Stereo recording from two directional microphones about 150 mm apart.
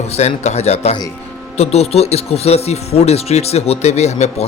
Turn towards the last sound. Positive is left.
turn(degrees=45)  # may be behind; listen again after turning